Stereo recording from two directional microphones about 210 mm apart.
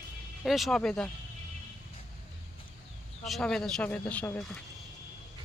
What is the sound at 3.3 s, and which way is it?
Speech, centre (ahead or behind).